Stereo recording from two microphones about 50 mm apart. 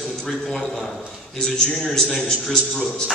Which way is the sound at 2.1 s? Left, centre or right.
Centre.